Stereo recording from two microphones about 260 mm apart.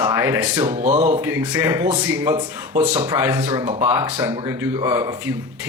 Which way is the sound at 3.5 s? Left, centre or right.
Right.